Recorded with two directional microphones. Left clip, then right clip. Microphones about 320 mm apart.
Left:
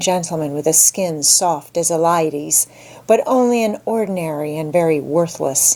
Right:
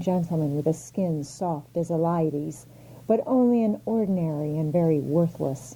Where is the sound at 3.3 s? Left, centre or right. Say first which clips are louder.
Left 8 dB; centre.